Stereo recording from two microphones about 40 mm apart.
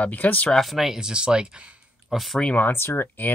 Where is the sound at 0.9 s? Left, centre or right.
Centre.